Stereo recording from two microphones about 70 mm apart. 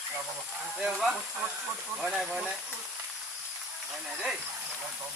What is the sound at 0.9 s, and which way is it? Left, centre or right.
Speech, centre.